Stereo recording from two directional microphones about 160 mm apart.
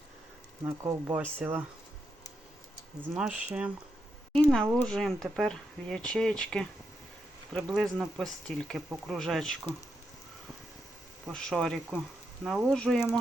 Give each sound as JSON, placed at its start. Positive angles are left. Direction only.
{"t": 0.9, "sound": "speech", "side_deg": -15}
{"t": 3.2, "sound": "speech", "side_deg": -5}
{"t": 4.3, "sound": "speech", "side_deg": 5}
{"t": 11.3, "sound": "speech", "side_deg": 5}